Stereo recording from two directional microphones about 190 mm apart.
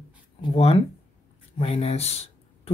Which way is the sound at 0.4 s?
30° left (ahead or behind).